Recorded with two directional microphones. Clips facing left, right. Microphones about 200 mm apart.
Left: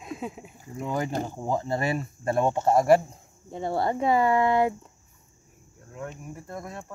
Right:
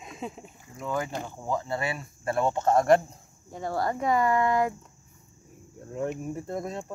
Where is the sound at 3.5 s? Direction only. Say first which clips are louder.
Left 2 dB; 25° left (ahead or behind).